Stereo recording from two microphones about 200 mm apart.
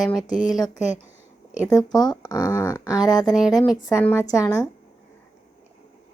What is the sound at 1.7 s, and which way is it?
Speech, 20° left (ahead or behind).